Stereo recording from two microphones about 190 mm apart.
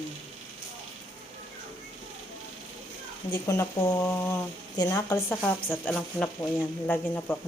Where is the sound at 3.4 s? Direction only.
20° left (ahead or behind).